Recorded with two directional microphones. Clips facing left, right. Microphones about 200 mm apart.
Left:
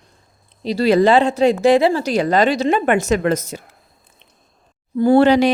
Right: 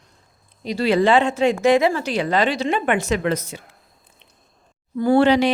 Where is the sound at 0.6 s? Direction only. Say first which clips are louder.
Left 4 dB; 35° left (ahead or behind).